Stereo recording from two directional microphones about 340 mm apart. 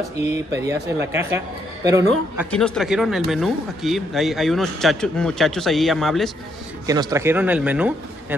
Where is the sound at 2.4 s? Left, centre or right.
Centre.